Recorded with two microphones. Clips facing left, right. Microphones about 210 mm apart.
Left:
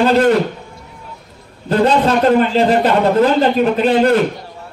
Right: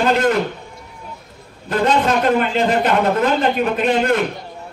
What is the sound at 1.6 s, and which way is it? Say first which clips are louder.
A man's voice: left 4 dB; 35° left (ahead or behind).